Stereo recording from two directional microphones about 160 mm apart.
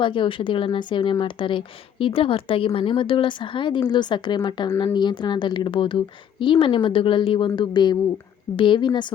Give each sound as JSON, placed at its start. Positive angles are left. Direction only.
{"t": 0.0, "sound": "a woman's voice", "side_deg": 30}